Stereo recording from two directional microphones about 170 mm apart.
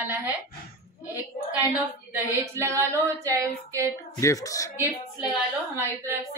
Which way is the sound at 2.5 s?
15° right (ahead or behind).